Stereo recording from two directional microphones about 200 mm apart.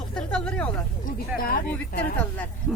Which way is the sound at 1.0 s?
45° left (ahead or behind).